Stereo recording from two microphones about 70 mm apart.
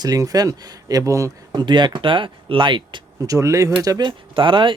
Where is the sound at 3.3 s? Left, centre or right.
Right.